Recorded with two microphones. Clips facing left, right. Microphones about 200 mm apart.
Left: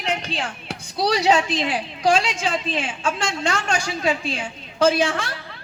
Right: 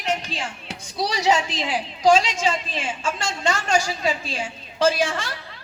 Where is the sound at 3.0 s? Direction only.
60° left (ahead or behind).